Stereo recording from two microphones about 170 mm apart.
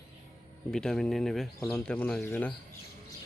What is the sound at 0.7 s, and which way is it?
Speech, 5° left (ahead or behind).